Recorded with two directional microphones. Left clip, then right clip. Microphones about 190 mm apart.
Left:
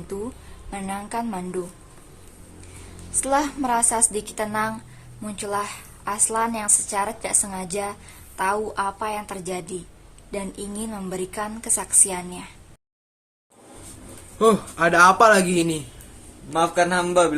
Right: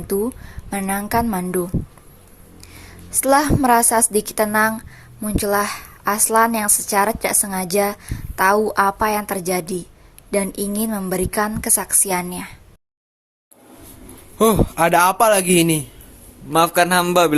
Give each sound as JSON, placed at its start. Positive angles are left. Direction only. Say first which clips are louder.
{"t": 0.1, "sound": "a woman's voice", "louder": "right 10 dB", "side_deg": -35}
{"t": 3.2, "sound": "a woman's voice", "louder": "right 7 dB", "side_deg": -35}
{"t": 14.3, "sound": "speech", "louder": "right 3 dB", "side_deg": -65}
{"t": 16.5, "sound": "a man's voice", "louder": "right 5 dB", "side_deg": -65}